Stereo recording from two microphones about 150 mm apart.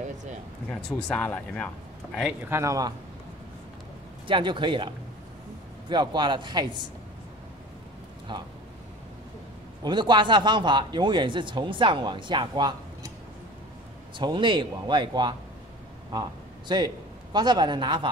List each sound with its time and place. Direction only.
0.0 s a sound: 55° right (ahead or behind)
0.7 s speech: 5° left (ahead or behind)
2.4 s a man's voice: 20° right (ahead or behind)
4.3 s speech: 35° right (ahead or behind)
8.3 s speech: 30° right (ahead or behind)
9.8 s speech: 30° right (ahead or behind)
14.1 s a man's voice: 30° right (ahead or behind)